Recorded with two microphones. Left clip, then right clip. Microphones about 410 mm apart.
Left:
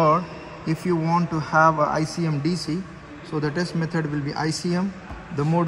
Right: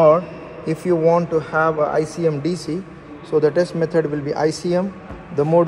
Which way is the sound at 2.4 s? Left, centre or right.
Centre.